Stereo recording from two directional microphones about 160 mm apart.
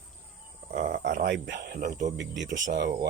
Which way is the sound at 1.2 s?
80° right.